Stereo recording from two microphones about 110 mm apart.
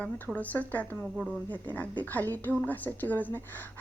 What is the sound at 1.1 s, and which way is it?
Speech, 5° right (ahead or behind).